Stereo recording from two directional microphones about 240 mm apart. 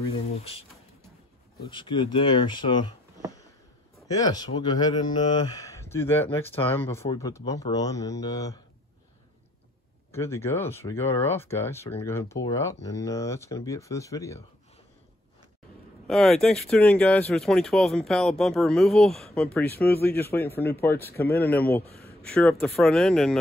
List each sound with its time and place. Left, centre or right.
0.3 s speech: left
1.7 s speech: centre
4.1 s speech: centre
10.1 s speech: centre
16.1 s speech: centre
21.2 s speech: left
21.5 s speech: centre